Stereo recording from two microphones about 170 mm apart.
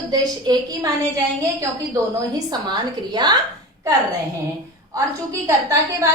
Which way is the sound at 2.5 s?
25° right (ahead or behind).